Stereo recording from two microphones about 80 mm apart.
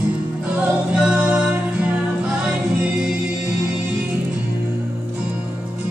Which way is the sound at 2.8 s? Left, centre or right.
Centre.